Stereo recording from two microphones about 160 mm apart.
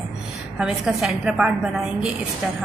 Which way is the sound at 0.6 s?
5° right (ahead or behind).